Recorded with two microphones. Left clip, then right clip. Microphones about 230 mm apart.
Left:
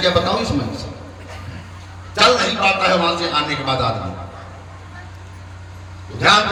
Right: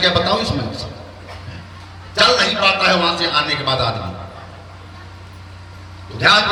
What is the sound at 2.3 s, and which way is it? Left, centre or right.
A man's voice, right.